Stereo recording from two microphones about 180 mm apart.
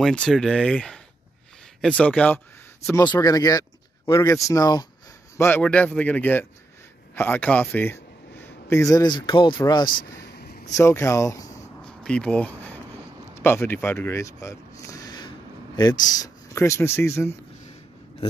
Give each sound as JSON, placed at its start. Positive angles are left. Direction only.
{"t": 0.0, "sound": "speech", "side_deg": 5}
{"t": 2.9, "sound": "a man's voice", "side_deg": 20}
{"t": 9.8, "sound": "a sound", "side_deg": 55}
{"t": 10.8, "sound": "speech", "side_deg": 15}
{"t": 11.8, "sound": "a sound", "side_deg": 5}
{"t": 13.3, "sound": "speech", "side_deg": 15}